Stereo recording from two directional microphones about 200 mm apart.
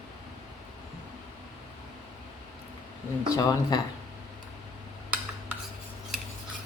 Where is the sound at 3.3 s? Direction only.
20° left (ahead or behind).